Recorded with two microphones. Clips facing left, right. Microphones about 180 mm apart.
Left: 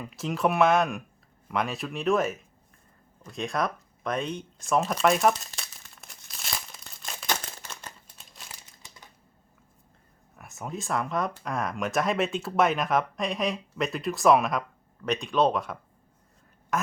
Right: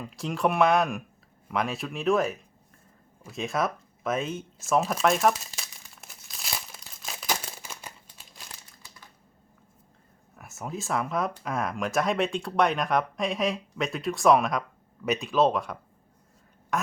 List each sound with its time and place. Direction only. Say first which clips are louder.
0.0 s speech: even; centre (ahead or behind)
3.2 s a sound: right 1 dB; centre (ahead or behind)
8.0 s crumpling: even; centre (ahead or behind)
10.3 s speech: even; centre (ahead or behind)
16.7 s duck: even; centre (ahead or behind)